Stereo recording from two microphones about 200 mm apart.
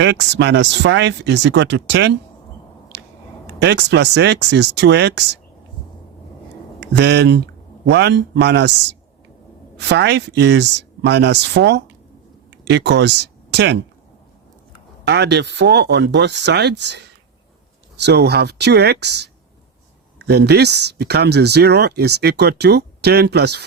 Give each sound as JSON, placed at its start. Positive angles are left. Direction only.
{"t": 0.0, "sound": "speech", "side_deg": -60}
{"t": 2.9, "sound": "squish", "side_deg": -60}
{"t": 3.4, "sound": "speech", "side_deg": -60}
{"t": 6.7, "sound": "speech", "side_deg": -60}
{"t": 9.7, "sound": "speech", "side_deg": -60}
{"t": 15.0, "sound": "speech", "side_deg": -60}